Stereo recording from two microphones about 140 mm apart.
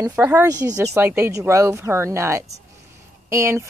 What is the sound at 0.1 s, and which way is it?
Speech, 10° right (ahead or behind).